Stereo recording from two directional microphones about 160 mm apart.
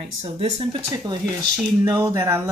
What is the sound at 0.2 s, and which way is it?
Speech, 35° right (ahead or behind).